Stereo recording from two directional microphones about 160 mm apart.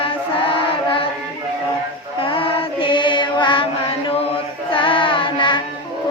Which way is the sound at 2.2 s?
35° left (ahead or behind).